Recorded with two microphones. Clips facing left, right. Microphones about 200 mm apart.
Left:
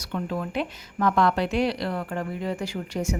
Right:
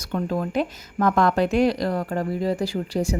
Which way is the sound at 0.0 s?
40° right (ahead or behind).